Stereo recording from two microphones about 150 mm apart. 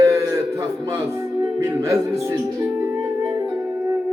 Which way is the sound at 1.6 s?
20° right (ahead or behind).